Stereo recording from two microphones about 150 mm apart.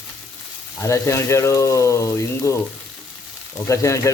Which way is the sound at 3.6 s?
20° left (ahead or behind).